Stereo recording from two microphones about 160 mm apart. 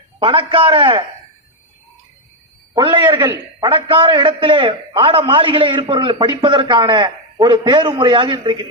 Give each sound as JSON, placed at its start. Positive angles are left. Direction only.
{"t": 0.2, "sound": "a man's voice", "side_deg": -35}
{"t": 2.7, "sound": "a man's voice", "side_deg": -30}